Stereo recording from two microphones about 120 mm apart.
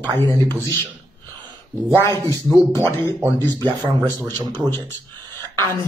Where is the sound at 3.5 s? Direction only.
35° right (ahead or behind).